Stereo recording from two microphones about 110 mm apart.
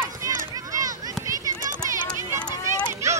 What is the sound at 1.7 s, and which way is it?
Run, 25° right (ahead or behind).